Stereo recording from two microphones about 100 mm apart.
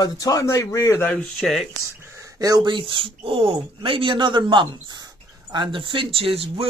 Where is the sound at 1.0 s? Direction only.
15° left (ahead or behind).